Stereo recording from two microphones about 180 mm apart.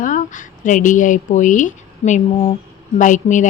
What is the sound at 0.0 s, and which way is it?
A woman's voice, 45° left (ahead or behind).